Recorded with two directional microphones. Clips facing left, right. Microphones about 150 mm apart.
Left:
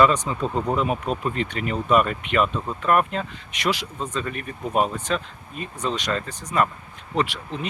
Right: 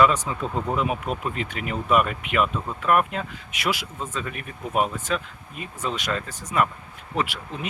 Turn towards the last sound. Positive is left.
turn(degrees=-10)  # may be behind; listen again after turning